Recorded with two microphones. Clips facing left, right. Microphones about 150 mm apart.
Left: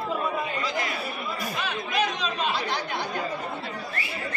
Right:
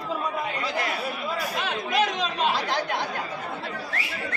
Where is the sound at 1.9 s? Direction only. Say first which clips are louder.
Right 2 dB; 90° right.